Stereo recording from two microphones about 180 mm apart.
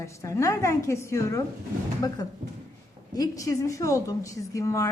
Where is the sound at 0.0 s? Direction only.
15° left (ahead or behind).